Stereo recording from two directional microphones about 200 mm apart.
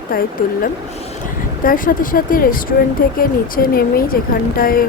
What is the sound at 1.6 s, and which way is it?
Speech, 45° left (ahead or behind).